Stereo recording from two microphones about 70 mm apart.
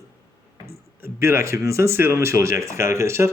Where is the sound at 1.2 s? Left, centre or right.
Right.